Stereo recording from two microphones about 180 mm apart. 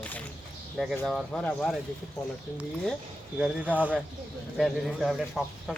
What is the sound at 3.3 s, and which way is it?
Speech, 5° right (ahead or behind).